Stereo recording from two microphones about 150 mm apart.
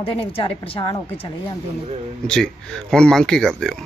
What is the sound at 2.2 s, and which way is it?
Speech, 5° left (ahead or behind).